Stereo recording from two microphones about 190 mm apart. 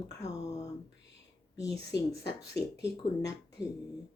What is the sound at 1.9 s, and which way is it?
Speech, 60° left (ahead or behind).